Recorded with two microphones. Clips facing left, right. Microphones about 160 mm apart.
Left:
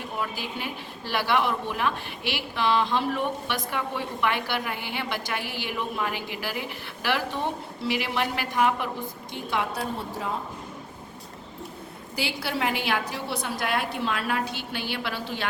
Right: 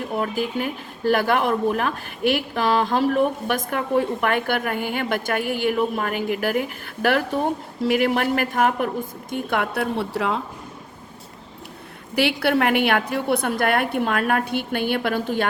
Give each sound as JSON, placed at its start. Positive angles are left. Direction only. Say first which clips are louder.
{"t": 0.2, "sound": "speech", "louder": "right 8 dB", "side_deg": -50}
{"t": 12.4, "sound": "a woman's voice", "louder": "right 8 dB", "side_deg": -60}